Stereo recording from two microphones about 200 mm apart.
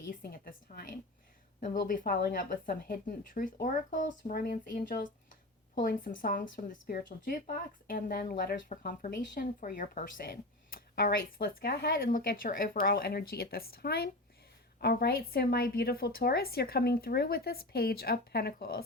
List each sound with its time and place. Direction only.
0.1 s speech: 45° left (ahead or behind)